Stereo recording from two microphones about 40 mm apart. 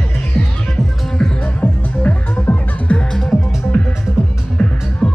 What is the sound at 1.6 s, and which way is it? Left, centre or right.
Music, left.